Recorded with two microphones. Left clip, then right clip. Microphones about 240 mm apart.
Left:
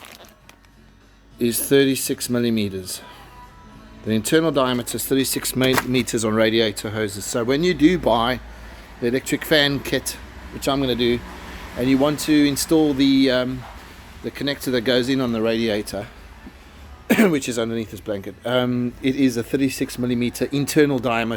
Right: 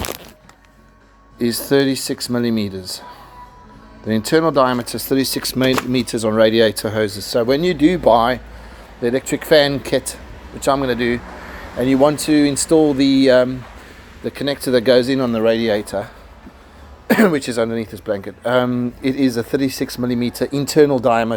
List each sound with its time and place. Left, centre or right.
1.4 s speech: centre
4.0 s speech: centre
6.5 s speech: centre
7.1 s speech: left
7.3 s speech: centre
11.8 s speech: centre
17.1 s speech: centre